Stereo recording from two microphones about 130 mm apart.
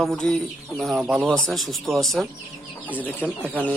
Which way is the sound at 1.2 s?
5° left (ahead or behind).